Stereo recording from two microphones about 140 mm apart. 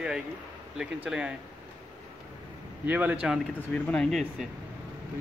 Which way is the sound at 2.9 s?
10° right (ahead or behind).